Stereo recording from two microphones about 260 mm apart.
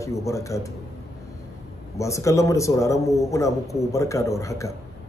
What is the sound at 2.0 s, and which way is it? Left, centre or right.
A man's voice, centre.